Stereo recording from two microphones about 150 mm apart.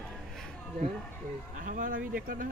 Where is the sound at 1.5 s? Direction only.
60° right (ahead or behind).